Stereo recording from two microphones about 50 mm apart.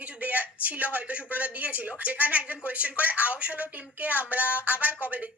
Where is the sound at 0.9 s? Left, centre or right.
Right.